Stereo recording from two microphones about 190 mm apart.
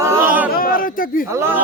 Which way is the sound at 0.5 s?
50° left (ahead or behind).